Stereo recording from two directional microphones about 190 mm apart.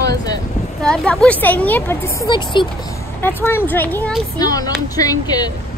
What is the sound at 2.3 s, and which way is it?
Speech, 25° left (ahead or behind).